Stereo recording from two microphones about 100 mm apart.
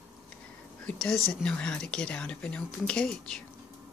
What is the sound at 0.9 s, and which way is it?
Speech, 5° left (ahead or behind).